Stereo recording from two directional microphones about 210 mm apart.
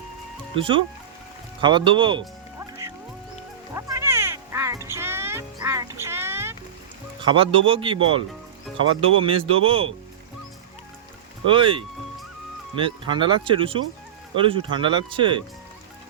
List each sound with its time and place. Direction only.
0.5 s speech: 25° right (ahead or behind)
3.8 s music: 15° right (ahead or behind)
7.2 s speech: 25° right (ahead or behind)
9.0 s speech: 25° right (ahead or behind)
11.4 s speech: 25° right (ahead or behind)